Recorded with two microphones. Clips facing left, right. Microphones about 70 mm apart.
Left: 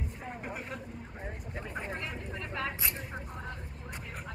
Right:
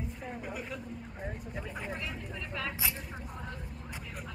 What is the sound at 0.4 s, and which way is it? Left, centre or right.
Vehicle, left.